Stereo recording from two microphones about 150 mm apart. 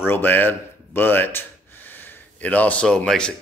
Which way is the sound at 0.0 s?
15° left (ahead or behind).